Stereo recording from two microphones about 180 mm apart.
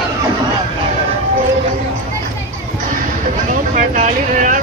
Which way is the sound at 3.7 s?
45° right (ahead or behind).